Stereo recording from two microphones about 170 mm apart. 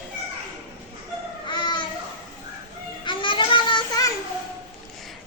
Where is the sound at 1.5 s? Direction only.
25° left (ahead or behind).